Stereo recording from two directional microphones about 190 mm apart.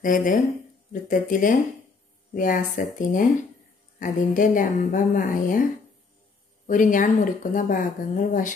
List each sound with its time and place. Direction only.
0.0 s a woman's voice: 45° left (ahead or behind)
6.7 s a woman's voice: 45° left (ahead or behind)